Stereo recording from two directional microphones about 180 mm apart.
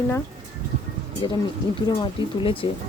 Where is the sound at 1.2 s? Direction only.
25° left (ahead or behind).